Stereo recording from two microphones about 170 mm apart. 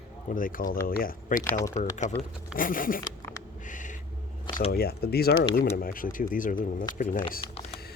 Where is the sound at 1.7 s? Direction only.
45° left (ahead or behind).